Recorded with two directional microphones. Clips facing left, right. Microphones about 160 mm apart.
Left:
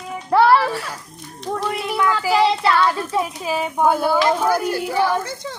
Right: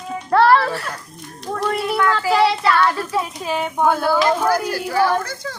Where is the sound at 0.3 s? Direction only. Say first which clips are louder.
Even; 10° left (ahead or behind).